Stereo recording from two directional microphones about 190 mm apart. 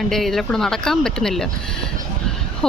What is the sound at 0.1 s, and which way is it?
Speech, centre (ahead or behind).